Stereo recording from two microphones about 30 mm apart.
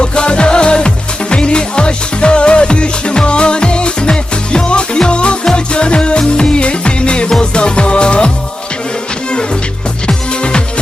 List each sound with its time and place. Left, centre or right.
0.0 s music: left
10.1 s music: left